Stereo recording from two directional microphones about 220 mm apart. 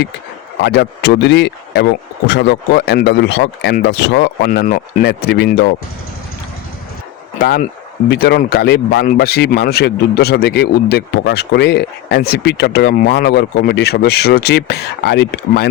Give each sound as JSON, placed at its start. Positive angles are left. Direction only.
{"t": 0.6, "sound": "a man's voice", "side_deg": 50}
{"t": 7.3, "sound": "a man's voice", "side_deg": 45}